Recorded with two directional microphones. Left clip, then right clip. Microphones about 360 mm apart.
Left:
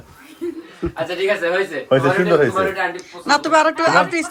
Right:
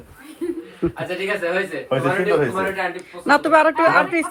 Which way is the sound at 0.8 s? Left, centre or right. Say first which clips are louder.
Right 2 dB; centre.